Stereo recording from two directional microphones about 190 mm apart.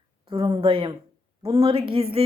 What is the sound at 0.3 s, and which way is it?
A woman's voice, 25° right (ahead or behind).